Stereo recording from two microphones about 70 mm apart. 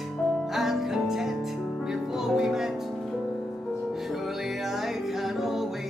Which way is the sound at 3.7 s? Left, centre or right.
Centre.